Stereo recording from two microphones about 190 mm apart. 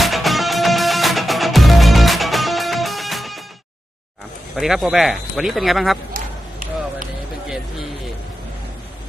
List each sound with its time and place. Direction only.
0.0 s music: centre (ahead or behind)
4.5 s speech: centre (ahead or behind)
6.1 s a sound: 45° right (ahead or behind)